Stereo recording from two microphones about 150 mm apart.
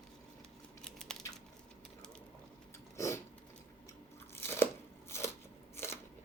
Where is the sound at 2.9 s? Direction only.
20° left (ahead or behind).